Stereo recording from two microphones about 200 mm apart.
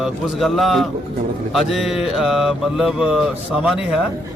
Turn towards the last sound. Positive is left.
turn(degrees=-5)  # may be behind; listen again after turning